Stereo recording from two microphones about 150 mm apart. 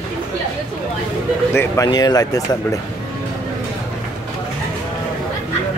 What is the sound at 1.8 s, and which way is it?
Speech, 25° left (ahead or behind).